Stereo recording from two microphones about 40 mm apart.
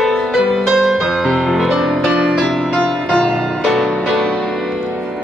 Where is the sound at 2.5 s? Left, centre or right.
Centre.